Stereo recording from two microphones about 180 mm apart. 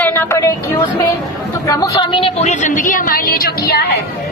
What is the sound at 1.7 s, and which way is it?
A woman's voice, 20° left (ahead or behind).